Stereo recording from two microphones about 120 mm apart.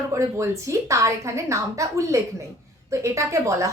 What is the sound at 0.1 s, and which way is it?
Speech, 25° right (ahead or behind).